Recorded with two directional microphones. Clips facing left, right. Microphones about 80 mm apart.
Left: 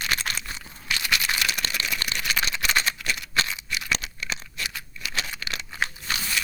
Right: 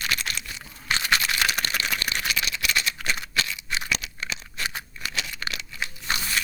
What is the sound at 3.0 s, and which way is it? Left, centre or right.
Cap gun, right.